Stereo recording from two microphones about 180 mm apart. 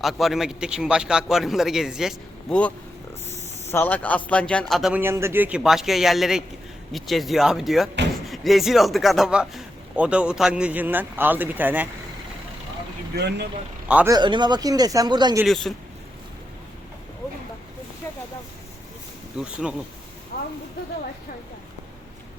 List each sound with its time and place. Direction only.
0.0 s speech: centre (ahead or behind)
13.1 s speech: 70° right (ahead or behind)
13.8 s a man's voice: 10° right (ahead or behind)
14.1 s speech: 25° right (ahead or behind)
15.4 s speech: centre (ahead or behind)
18.0 s vehicle: 15° left (ahead or behind)
19.4 s speech: 5° right (ahead or behind)
20.3 s a sound: 55° left (ahead or behind)